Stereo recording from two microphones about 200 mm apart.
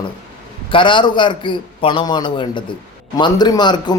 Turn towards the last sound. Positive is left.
turn(degrees=20)  # may be behind; listen again after turning